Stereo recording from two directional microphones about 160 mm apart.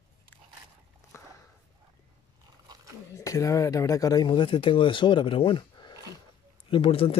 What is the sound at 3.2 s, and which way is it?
Speech, 20° left (ahead or behind).